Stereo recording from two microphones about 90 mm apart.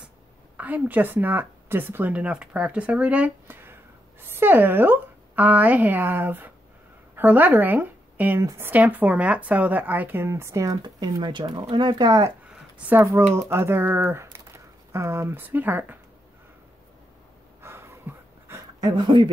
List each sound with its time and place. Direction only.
0.6 s a woman's voice: 20° right (ahead or behind)
8.4 s a woman's voice: 35° right (ahead or behind)
8.6 s speech: 20° right (ahead or behind); by 10.8 s 35° right (ahead or behind)
10.8 s speech: 50° right (ahead or behind)
12.4 s a sound: 15° right (ahead or behind)
13.0 s speech: 30° right (ahead or behind)
17.6 s a sound: 30° right (ahead or behind)
18.9 s speech: 55° right (ahead or behind)